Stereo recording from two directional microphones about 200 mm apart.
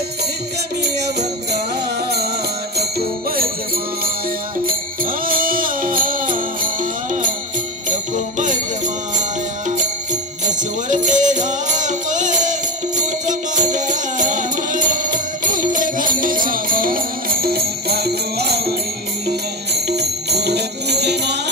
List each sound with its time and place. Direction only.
2.8 s jingle bell: 50° right (ahead or behind)
4.6 s music: 45° right (ahead or behind)
10.4 s music: 40° right (ahead or behind)
19.9 s music: 55° right (ahead or behind)